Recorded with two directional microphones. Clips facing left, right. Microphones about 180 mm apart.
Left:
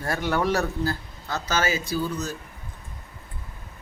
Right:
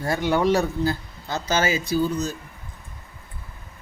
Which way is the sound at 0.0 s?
15° right (ahead or behind).